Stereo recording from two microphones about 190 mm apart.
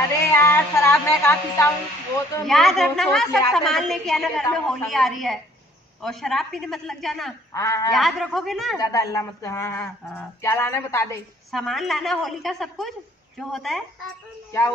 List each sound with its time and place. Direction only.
0.2 s speech: 15° left (ahead or behind)
2.4 s a woman's voice: centre (ahead or behind)
7.5 s speech: 15° left (ahead or behind)
7.9 s a woman's voice: centre (ahead or behind)
8.7 s speech: 20° left (ahead or behind)
11.5 s a woman's voice: centre (ahead or behind)